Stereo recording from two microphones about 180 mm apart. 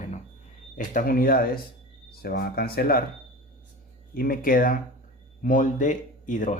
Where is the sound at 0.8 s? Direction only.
55° left (ahead or behind).